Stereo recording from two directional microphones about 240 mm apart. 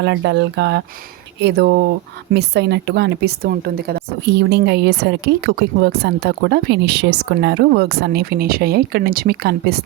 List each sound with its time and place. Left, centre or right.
0.0 s a woman's voice: right